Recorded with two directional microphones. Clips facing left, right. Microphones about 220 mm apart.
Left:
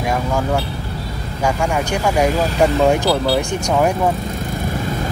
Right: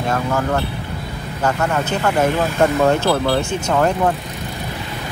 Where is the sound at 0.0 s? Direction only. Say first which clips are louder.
Even; 15° left (ahead or behind).